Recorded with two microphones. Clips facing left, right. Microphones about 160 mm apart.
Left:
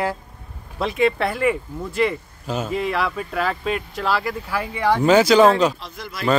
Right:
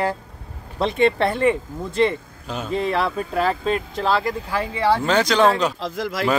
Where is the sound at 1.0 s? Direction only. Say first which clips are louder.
Right 1 dB; 30° right (ahead or behind).